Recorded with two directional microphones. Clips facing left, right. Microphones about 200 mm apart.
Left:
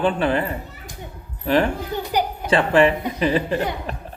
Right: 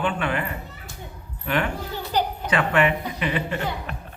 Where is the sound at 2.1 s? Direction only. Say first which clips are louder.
Left 1 dB; 10° left (ahead or behind).